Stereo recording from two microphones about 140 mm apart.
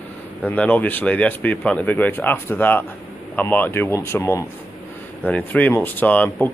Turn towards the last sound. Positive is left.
turn(degrees=10)  # may be behind; listen again after turning